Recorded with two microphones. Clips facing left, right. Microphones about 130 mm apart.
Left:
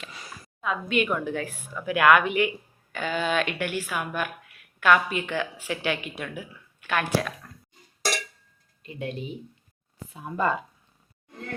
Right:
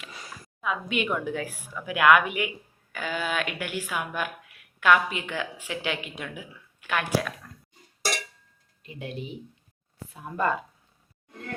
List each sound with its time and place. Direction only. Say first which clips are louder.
0.6 s speech: left 3 dB; 10° right (ahead or behind)
8.9 s speech: left 4 dB; 5° right (ahead or behind)
9.1 s speech: left 1 dB; 70° right (ahead or behind)
10.1 s speech: left 1 dB; centre (ahead or behind)